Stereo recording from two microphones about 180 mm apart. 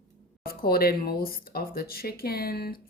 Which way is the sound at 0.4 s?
55° left (ahead or behind).